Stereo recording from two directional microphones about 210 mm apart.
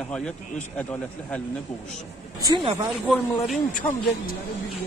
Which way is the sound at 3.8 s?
10° left (ahead or behind).